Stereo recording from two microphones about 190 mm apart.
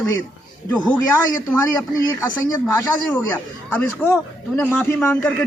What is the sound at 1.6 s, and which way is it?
A man's voice, 15° left (ahead or behind).